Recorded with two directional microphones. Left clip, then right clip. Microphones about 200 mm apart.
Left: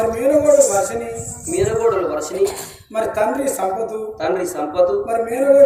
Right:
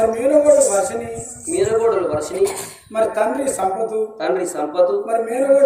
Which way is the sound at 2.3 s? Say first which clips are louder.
Left 1 dB; 30° right (ahead or behind).